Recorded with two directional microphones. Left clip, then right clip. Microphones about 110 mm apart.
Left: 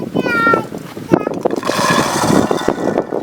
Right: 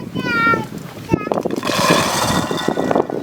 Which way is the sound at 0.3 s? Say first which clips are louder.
Left 2 dB; 10° right (ahead or behind).